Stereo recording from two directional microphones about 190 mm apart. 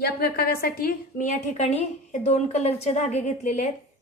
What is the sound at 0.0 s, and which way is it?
A woman's voice, 55° left (ahead or behind).